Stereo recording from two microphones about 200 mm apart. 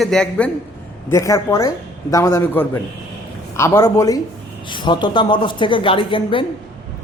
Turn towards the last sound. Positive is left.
turn(degrees=25)  # may be behind; listen again after turning